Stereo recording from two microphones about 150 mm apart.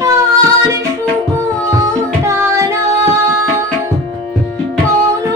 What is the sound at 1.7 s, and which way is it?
Music, 20° right (ahead or behind).